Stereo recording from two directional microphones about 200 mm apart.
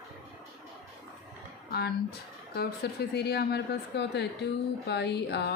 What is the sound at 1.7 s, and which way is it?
A woman's voice, 50° left (ahead or behind).